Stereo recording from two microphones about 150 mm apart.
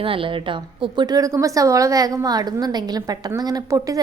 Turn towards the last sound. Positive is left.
turn(degrees=-25)  # may be behind; listen again after turning